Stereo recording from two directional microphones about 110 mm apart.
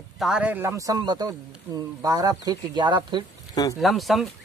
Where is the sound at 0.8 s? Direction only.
35° right (ahead or behind).